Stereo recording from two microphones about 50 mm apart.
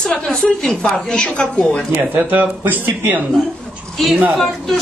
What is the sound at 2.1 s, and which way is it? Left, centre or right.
Speech, right.